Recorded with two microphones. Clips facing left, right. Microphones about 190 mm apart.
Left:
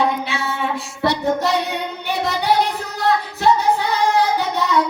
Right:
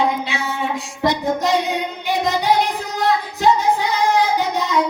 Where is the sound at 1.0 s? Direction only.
15° right (ahead or behind).